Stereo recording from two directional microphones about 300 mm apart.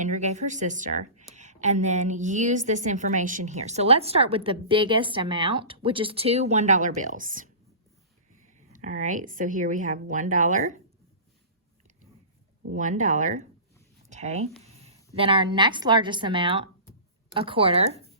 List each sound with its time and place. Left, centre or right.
0.0 s a woman's voice: right
8.5 s a woman's voice: right
12.7 s a woman's voice: right